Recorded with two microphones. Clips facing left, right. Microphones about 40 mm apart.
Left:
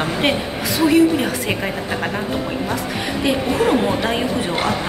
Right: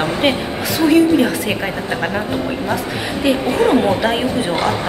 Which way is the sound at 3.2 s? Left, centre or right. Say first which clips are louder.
Right 3 dB; centre.